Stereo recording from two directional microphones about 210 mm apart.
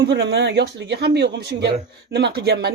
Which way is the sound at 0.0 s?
50° right (ahead or behind).